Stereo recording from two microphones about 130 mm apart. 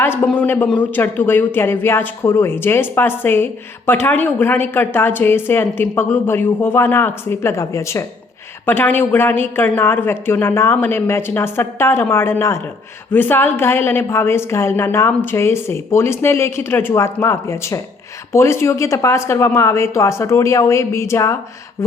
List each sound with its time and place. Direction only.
0.0 s a woman's voice: 15° left (ahead or behind)